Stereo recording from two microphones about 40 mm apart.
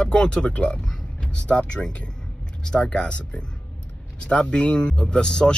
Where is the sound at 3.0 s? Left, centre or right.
Left.